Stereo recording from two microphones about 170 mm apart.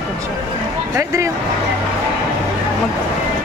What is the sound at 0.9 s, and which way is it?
Speech, 15° right (ahead or behind).